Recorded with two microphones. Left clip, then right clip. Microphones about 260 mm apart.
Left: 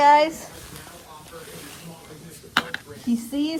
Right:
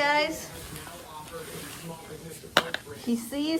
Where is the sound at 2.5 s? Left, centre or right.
Right.